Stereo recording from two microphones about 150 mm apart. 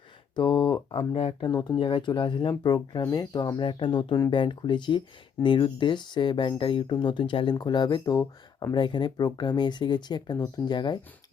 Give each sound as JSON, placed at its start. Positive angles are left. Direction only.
{"t": 0.3, "sound": "speech", "side_deg": 30}